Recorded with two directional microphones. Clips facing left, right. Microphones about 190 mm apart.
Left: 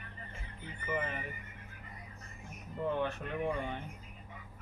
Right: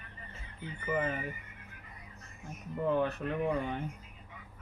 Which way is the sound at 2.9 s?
35° right (ahead or behind).